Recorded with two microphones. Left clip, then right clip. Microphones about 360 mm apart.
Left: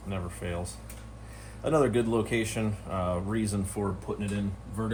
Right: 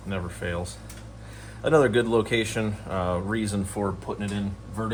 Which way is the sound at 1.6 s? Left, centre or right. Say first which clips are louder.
Right 5 dB; right.